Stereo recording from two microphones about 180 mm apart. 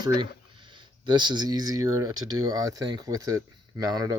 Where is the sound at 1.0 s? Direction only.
25° right (ahead or behind).